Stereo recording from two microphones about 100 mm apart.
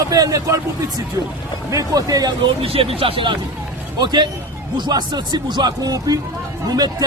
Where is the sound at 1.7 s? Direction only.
35° right (ahead or behind).